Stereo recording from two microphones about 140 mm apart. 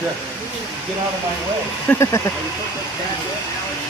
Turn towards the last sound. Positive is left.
turn(degrees=20)  # may be behind; listen again after turning